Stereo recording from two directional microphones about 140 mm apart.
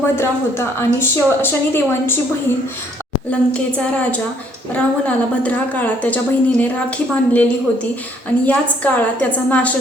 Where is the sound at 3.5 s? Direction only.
10° left (ahead or behind).